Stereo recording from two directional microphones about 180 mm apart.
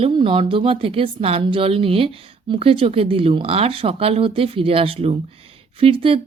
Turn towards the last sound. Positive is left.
turn(degrees=-30)  # may be behind; listen again after turning